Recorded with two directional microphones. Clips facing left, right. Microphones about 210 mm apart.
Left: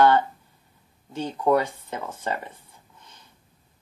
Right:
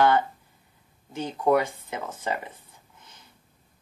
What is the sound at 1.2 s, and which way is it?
Speech, 15° right (ahead or behind).